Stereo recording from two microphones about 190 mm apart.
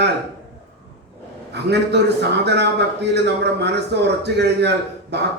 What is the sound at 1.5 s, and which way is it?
A man's voice, 60° right (ahead or behind).